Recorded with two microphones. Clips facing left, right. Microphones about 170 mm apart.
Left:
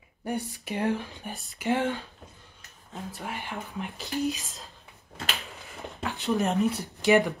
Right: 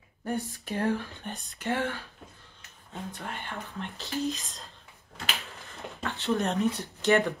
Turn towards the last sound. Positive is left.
turn(degrees=10)  # may be behind; listen again after turning